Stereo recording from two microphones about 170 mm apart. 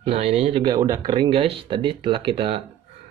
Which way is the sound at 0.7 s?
20° right (ahead or behind).